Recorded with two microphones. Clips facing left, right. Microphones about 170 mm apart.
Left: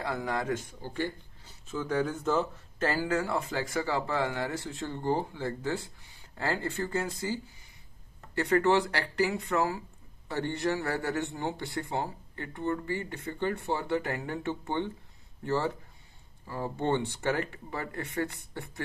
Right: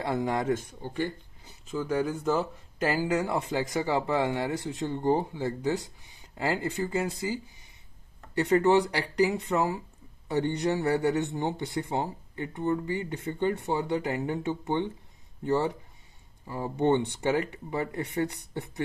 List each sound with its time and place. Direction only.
0.0 s a man's voice: 25° right (ahead or behind)
8.4 s a man's voice: 20° right (ahead or behind)